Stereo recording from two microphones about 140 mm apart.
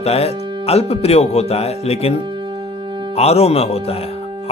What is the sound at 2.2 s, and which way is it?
Music, 35° right (ahead or behind).